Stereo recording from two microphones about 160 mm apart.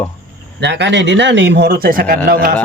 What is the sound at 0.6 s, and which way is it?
Speech, 90° right.